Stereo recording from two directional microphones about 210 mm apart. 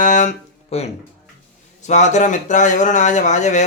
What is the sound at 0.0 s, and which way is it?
Music, 35° left (ahead or behind).